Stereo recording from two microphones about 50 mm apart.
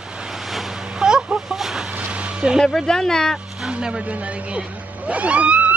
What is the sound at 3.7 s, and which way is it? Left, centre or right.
Speech, centre.